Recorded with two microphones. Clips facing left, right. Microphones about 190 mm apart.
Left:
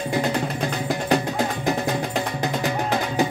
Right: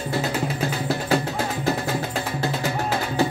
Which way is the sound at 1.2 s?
15° left (ahead or behind).